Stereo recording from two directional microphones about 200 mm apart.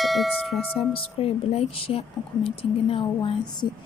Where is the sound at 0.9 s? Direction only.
30° left (ahead or behind).